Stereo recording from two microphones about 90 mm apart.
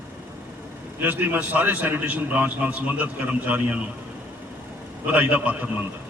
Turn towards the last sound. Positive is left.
turn(degrees=-15)  # may be behind; listen again after turning